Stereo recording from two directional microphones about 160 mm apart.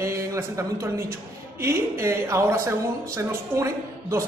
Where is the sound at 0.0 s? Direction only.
20° right (ahead or behind).